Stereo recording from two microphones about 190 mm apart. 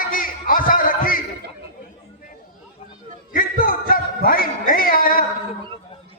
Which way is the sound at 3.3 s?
50° left (ahead or behind).